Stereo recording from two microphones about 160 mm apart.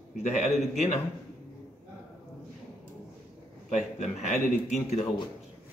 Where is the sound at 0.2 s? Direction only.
45° left (ahead or behind).